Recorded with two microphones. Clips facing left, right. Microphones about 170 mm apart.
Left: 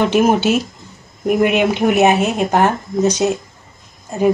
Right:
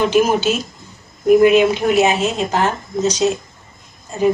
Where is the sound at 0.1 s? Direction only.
65° left (ahead or behind).